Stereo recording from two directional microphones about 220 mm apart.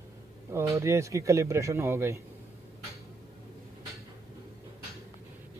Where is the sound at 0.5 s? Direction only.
10° right (ahead or behind).